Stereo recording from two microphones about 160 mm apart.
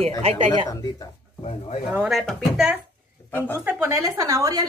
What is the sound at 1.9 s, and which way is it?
Speech, 5° right (ahead or behind).